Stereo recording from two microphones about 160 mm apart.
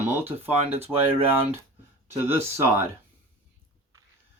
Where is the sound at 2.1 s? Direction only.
15° right (ahead or behind).